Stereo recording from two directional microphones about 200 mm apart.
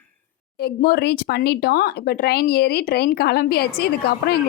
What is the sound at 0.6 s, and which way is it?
Speech, 50° left (ahead or behind).